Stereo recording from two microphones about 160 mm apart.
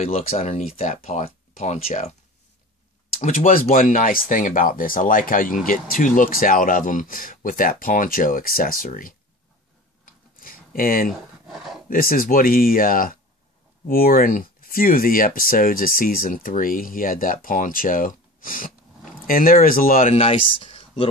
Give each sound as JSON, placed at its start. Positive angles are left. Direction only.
{"t": 0.0, "sound": "speech", "side_deg": 40}
{"t": 3.2, "sound": "speech", "side_deg": 50}
{"t": 10.0, "sound": "a sound", "side_deg": 60}
{"t": 11.4, "sound": "a sound", "side_deg": 0}
{"t": 11.9, "sound": "speech", "side_deg": 65}
{"t": 20.1, "sound": "speech", "side_deg": 35}